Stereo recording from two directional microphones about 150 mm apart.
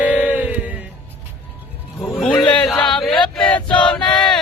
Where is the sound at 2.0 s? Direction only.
Centre (ahead or behind).